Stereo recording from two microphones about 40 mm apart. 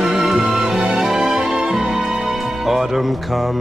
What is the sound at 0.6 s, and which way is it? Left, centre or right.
Music, right.